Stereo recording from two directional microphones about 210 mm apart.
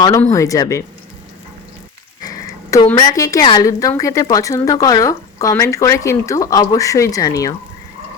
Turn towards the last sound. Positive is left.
turn(degrees=15)  # may be behind; listen again after turning